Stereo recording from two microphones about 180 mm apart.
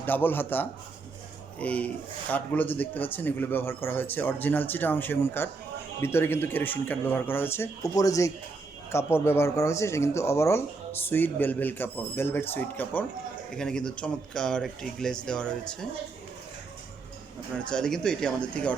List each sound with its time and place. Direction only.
0.0 s speech: 10° left (ahead or behind)
17.7 s speech: 5° left (ahead or behind)